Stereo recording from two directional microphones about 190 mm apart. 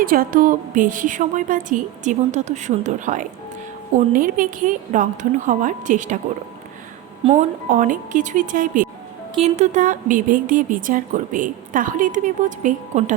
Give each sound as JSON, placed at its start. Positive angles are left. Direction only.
{"t": 0.0, "sound": "a woman's voice", "side_deg": -50}
{"t": 7.2, "sound": "a woman's voice", "side_deg": -30}
{"t": 7.7, "sound": "a woman's voice", "side_deg": -45}